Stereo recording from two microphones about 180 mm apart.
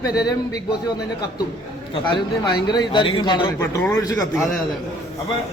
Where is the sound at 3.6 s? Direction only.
15° left (ahead or behind).